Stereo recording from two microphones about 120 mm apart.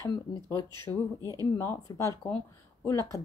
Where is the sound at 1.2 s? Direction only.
30° right (ahead or behind).